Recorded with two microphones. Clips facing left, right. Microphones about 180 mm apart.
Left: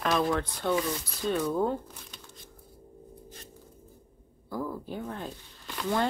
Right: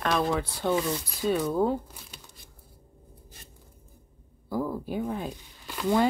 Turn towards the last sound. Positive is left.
turn(degrees=-10)  # may be behind; listen again after turning